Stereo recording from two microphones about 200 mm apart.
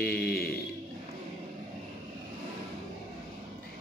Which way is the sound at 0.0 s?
50° left (ahead or behind).